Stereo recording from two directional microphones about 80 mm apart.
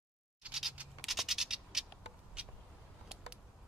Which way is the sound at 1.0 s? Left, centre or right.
Centre.